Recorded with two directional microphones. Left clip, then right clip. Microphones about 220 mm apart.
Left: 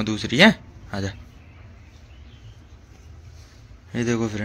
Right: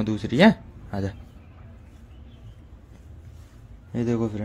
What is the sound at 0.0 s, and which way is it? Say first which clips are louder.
Speech: left 3 dB; 10° right (ahead or behind).